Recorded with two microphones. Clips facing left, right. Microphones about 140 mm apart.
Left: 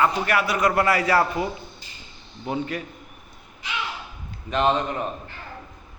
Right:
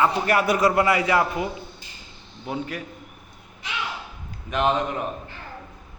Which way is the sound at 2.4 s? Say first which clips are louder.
Left 2 dB; centre (ahead or behind).